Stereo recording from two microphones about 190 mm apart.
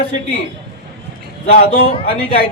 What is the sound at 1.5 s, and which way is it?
Speech, 45° left (ahead or behind).